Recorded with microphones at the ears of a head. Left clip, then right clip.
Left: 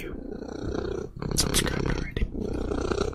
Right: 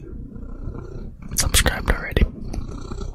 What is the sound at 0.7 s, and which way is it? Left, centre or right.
Purr, left.